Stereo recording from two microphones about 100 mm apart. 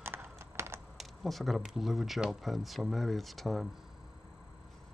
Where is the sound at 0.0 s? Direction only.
25° right (ahead or behind).